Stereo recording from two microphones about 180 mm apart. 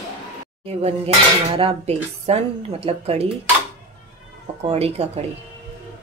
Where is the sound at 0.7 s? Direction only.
35° right (ahead or behind).